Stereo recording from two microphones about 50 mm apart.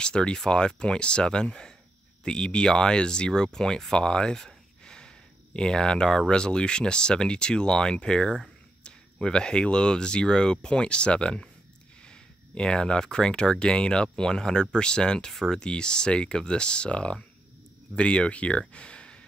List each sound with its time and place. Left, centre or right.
0.0 s speech: centre